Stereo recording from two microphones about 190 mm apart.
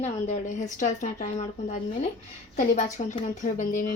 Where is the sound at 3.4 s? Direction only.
45° left (ahead or behind).